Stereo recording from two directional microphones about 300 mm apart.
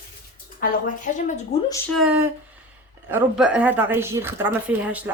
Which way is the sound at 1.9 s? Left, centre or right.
Centre.